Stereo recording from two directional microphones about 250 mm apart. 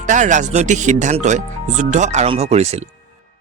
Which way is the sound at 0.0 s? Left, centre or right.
Right.